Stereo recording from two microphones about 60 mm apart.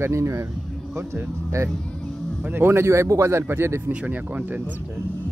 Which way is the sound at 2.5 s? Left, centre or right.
Right.